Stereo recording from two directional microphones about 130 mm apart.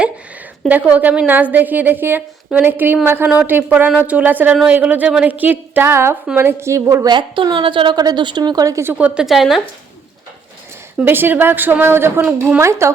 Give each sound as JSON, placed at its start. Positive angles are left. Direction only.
{"t": 0.7, "sound": "a woman's voice", "side_deg": -10}
{"t": 7.1, "sound": "a woman's voice", "side_deg": -35}
{"t": 10.9, "sound": "a woman's voice", "side_deg": -15}